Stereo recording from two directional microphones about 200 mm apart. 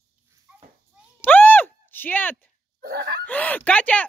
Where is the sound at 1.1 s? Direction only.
10° left (ahead or behind).